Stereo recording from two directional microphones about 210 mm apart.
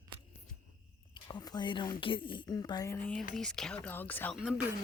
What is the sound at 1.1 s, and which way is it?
Speech, 20° left (ahead or behind).